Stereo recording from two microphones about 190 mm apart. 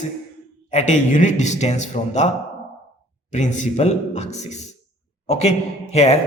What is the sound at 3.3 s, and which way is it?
A man's voice, 35° left (ahead or behind).